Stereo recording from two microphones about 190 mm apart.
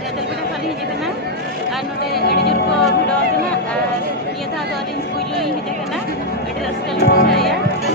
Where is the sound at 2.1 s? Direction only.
60° left (ahead or behind).